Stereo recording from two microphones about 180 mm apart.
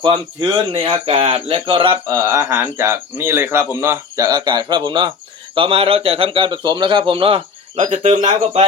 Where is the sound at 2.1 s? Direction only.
15° right (ahead or behind).